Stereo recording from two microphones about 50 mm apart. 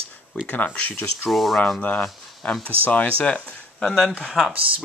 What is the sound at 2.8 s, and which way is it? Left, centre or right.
Speech, left.